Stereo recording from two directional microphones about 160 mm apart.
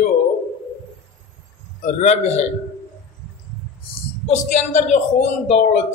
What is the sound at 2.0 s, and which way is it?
Speech, 45° left (ahead or behind).